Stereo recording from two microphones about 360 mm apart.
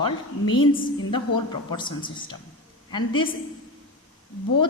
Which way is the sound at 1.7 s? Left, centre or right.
Centre.